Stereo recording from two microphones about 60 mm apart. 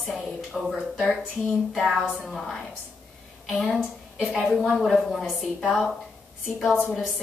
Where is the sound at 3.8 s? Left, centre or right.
Centre.